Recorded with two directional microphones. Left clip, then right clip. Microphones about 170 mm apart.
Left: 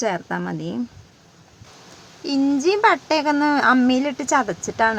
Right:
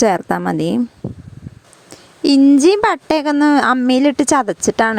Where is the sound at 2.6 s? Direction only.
55° right (ahead or behind).